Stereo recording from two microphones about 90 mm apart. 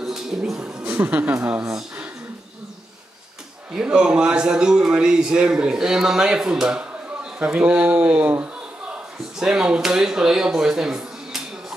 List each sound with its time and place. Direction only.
0.0 s speech: 5° right (ahead or behind)
1.7 s speech: 10° right (ahead or behind)
3.7 s a man's voice: 10° right (ahead or behind)
9.4 s speech: 10° right (ahead or behind)